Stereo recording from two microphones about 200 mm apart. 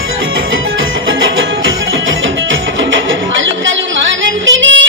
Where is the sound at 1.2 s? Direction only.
75° right (ahead or behind).